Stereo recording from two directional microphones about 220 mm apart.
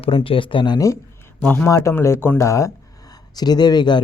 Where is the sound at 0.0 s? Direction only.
25° left (ahead or behind).